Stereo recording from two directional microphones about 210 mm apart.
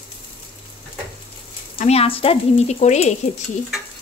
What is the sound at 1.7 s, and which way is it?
Speech, 30° left (ahead or behind).